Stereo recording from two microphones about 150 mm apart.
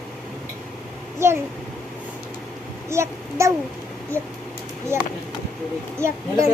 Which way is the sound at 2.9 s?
20° right (ahead or behind).